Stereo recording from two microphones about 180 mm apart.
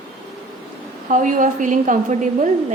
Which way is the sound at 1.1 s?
45° right (ahead or behind).